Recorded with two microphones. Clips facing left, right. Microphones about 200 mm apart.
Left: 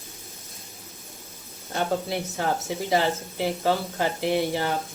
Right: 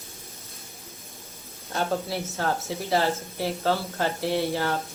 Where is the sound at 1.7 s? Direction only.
15° left (ahead or behind).